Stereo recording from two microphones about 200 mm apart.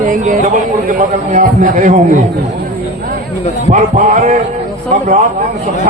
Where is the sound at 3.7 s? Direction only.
40° right (ahead or behind).